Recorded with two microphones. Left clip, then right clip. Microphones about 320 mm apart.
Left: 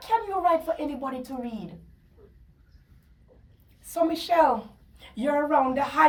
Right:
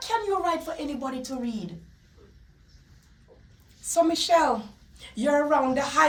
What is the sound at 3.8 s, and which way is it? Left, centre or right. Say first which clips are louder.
A woman's voice: right 3 dB; centre.